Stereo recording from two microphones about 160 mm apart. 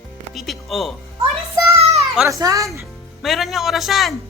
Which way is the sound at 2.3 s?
20° right (ahead or behind).